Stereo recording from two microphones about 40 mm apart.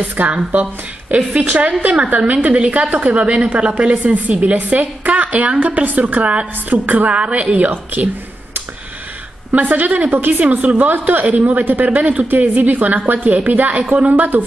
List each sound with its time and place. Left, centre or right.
0.3 s a woman's voice: right
1.4 s a woman's voice: right
7.7 s a woman's voice: right
9.5 s a woman's voice: right